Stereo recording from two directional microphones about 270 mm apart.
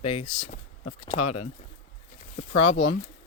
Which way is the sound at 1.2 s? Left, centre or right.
Left.